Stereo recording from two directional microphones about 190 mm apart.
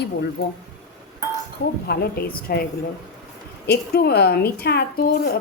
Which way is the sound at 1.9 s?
55° left (ahead or behind).